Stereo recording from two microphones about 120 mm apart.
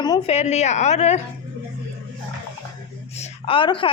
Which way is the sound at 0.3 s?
65° left (ahead or behind).